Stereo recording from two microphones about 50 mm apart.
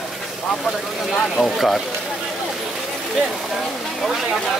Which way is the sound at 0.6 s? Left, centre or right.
Centre.